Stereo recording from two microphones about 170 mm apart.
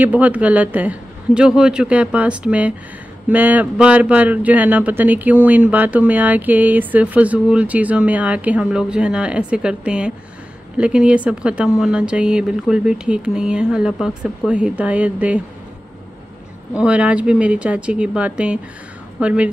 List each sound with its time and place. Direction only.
0.0 s a man's voice: 10° right (ahead or behind)
16.7 s a man's voice: 5° right (ahead or behind)